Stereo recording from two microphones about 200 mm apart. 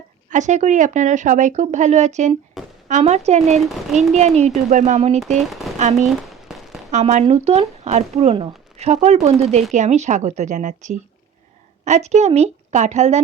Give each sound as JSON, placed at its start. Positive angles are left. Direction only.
{"t": 0.3, "sound": "speech", "side_deg": -35}
{"t": 2.6, "sound": "a sound", "side_deg": 0}
{"t": 2.9, "sound": "speech", "side_deg": -35}
{"t": 5.7, "sound": "firecracker", "side_deg": 0}
{"t": 6.9, "sound": "speech", "side_deg": -35}